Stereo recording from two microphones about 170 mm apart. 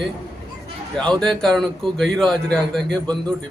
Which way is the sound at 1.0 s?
5° left (ahead or behind).